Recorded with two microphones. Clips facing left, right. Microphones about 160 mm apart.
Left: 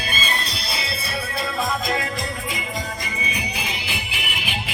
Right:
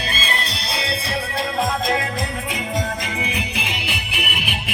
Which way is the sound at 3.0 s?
65° right (ahead or behind).